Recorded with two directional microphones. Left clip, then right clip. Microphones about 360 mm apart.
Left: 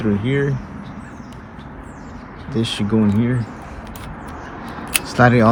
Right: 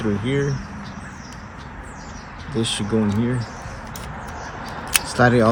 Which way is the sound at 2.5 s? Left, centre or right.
Centre.